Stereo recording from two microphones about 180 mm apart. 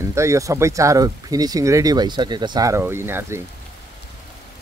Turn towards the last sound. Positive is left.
turn(degrees=-15)  # may be behind; listen again after turning